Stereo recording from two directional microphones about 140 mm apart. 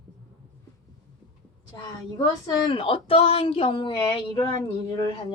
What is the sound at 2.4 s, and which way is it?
Speech, 40° left (ahead or behind).